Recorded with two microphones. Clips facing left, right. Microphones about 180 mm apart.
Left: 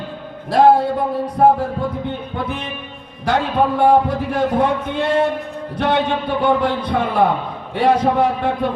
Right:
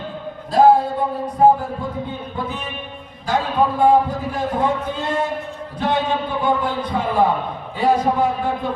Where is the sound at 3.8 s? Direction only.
70° left (ahead or behind).